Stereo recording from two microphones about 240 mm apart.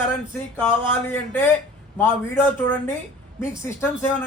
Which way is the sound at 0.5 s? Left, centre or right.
Centre.